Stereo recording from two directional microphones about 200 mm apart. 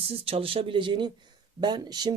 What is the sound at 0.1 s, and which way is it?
Speech, 30° right (ahead or behind).